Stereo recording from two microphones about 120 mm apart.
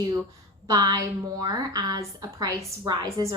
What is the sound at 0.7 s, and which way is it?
A woman's voice, 35° right (ahead or behind).